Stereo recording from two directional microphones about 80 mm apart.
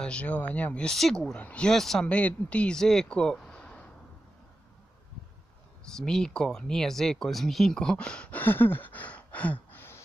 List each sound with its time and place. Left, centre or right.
0.0 s speech: centre
0.8 s speech: centre
1.3 s speech: centre
1.7 s speech: centre
2.0 s speech: centre
5.9 s speech: centre
8.4 s a sound: left